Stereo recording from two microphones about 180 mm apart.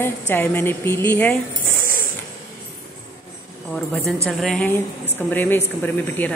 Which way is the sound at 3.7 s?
5° left (ahead or behind).